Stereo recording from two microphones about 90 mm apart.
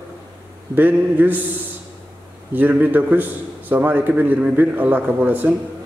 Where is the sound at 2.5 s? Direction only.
20° right (ahead or behind).